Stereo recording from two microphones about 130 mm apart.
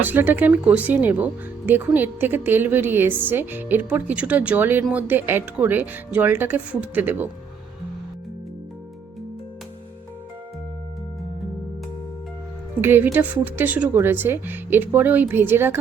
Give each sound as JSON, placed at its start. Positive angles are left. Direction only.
{"t": 0.0, "sound": "speech", "side_deg": -15}
{"t": 12.8, "sound": "speech", "side_deg": -15}